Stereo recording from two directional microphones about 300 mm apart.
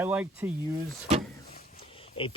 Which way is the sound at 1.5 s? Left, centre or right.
Centre.